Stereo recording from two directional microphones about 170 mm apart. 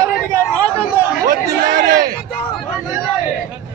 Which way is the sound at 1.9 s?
60° right (ahead or behind).